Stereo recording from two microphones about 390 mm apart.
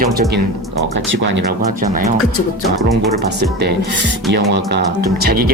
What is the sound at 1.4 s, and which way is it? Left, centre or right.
Speech, right.